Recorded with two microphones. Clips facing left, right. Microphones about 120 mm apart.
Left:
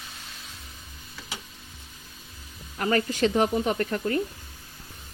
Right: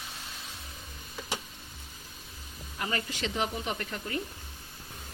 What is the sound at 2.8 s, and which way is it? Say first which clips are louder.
Speech: left 9 dB; 65° left (ahead or behind).